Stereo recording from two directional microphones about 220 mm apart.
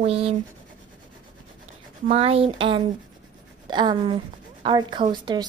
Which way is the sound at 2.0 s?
30° right (ahead or behind).